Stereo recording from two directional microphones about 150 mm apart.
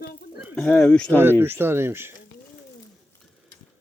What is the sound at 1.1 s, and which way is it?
Speech, 15° right (ahead or behind).